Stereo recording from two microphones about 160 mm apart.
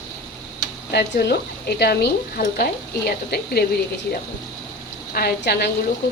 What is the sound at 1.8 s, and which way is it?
A woman's voice, 90° left.